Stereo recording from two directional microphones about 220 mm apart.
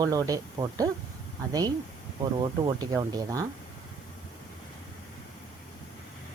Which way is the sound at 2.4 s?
20° right (ahead or behind).